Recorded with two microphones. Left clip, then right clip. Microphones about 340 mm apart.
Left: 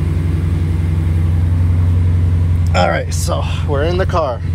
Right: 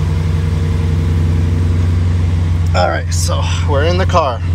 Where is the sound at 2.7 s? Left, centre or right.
Left.